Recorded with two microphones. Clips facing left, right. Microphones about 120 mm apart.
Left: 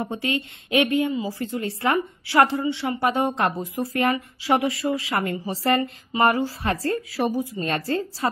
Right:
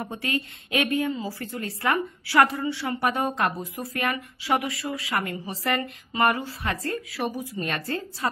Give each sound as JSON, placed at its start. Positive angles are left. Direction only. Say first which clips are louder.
{"t": 0.0, "sound": "a woman's voice", "louder": "left 3 dB", "side_deg": 25}